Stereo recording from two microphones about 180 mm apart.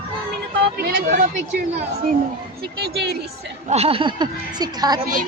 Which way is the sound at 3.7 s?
35° right (ahead or behind).